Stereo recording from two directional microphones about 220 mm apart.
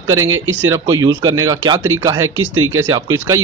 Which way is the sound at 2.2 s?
65° right (ahead or behind).